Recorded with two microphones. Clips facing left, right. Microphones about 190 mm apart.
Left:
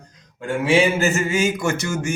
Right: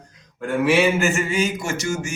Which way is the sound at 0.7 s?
35° left (ahead or behind).